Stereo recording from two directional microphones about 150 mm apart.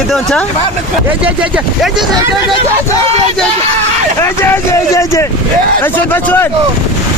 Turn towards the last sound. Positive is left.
turn(degrees=15)  # may be behind; listen again after turning